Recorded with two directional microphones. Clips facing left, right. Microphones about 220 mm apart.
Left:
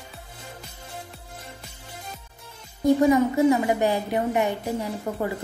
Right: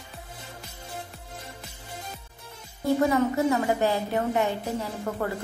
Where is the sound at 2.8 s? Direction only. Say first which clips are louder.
Left 4 dB; 15° left (ahead or behind).